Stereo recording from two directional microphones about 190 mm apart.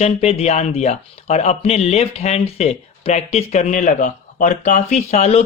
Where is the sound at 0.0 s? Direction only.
30° left (ahead or behind).